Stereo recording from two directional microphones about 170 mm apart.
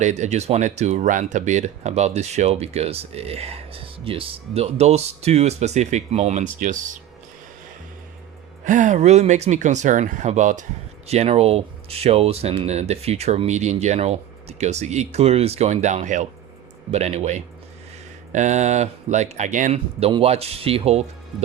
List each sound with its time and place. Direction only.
0.0 s speech: 45° right (ahead or behind)
8.6 s speech: 45° right (ahead or behind)